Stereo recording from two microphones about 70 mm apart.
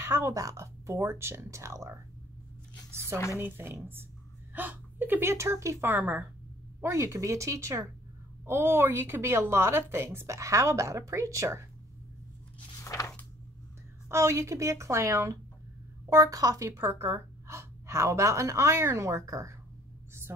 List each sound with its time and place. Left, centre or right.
0.0 s a woman's voice: right
3.3 s a woman's voice: right
5.3 s a woman's voice: right
5.9 s a woman's voice: right
6.8 s a woman's voice: right
8.5 s a woman's voice: right
12.8 s a sound: left
14.0 s a woman's voice: right
16.1 s a woman's voice: right
16.7 s a woman's voice: right
20.3 s speech: right